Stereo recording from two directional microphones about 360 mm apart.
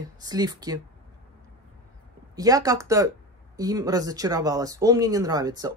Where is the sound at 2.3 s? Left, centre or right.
Centre.